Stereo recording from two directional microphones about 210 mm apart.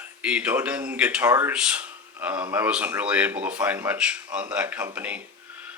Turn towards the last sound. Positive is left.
turn(degrees=-5)  # may be behind; listen again after turning